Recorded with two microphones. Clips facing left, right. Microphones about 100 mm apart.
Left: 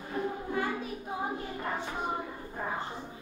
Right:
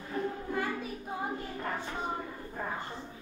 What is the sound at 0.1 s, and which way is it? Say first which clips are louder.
Music: left 1 dB; 10° left (ahead or behind).